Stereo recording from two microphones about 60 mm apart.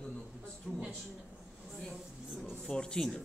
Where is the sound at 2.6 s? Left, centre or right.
Centre.